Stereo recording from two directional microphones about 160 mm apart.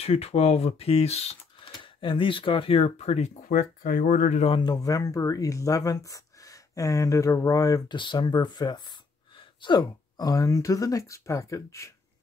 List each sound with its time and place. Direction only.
0.0 s speech: 40° left (ahead or behind); by 4.5 s 55° left (ahead or behind)
4.5 s speech: 30° left (ahead or behind)